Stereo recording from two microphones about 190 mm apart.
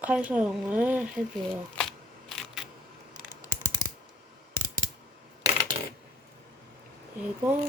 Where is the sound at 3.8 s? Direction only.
50° right (ahead or behind).